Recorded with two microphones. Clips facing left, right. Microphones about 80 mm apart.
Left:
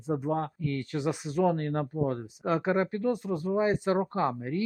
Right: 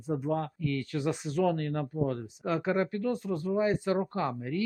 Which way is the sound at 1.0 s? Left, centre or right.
Centre.